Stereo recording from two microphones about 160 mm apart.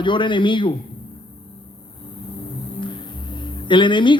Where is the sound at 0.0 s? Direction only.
30° left (ahead or behind).